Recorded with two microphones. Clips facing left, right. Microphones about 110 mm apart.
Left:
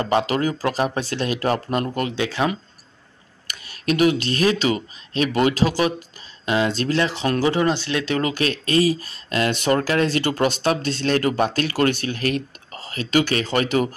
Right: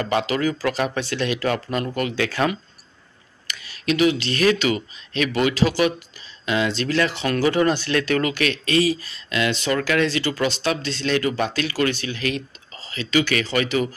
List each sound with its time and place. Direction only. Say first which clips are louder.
0.0 s speech: left 1 dB; 30° left (ahead or behind)
2.1 s speech: even; 20° left (ahead or behind)
3.4 s speech: left 1 dB; 45° left (ahead or behind)
10.0 s speech: left 2 dB; 50° left (ahead or behind)